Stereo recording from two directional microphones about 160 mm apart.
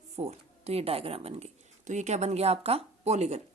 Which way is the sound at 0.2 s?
40° right (ahead or behind).